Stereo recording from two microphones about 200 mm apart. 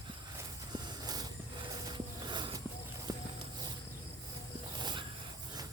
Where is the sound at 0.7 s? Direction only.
20° right (ahead or behind).